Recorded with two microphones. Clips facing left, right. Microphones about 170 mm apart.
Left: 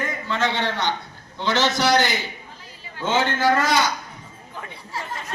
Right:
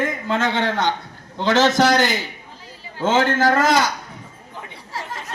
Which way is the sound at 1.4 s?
90° right.